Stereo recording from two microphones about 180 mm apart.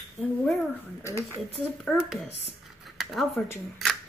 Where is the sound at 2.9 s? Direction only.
Centre (ahead or behind).